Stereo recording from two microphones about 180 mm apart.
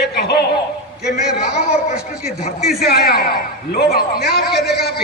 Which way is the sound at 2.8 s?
60° left (ahead or behind).